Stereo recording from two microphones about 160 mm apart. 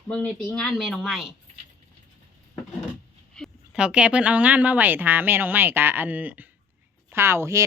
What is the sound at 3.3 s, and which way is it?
A woman's voice, centre (ahead or behind).